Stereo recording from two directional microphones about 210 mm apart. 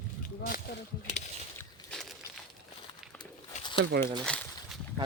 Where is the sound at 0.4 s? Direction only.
45° left (ahead or behind).